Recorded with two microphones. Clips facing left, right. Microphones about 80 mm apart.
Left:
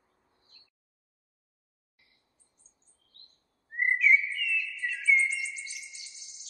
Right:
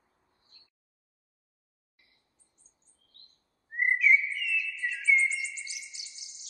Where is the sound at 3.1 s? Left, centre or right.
Right.